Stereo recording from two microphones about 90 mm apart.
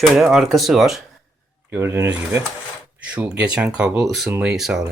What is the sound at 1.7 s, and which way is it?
Speech, 30° right (ahead or behind).